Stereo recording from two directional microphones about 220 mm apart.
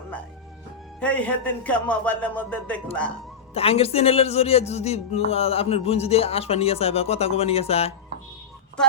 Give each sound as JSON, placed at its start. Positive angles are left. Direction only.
{"t": 0.9, "sound": "a man's voice", "side_deg": 5}
{"t": 3.5, "sound": "speech", "side_deg": 25}